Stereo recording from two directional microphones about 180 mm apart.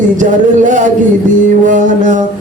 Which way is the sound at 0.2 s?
45° right (ahead or behind).